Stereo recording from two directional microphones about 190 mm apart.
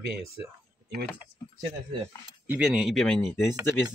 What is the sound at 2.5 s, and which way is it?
Speech, 5° right (ahead or behind).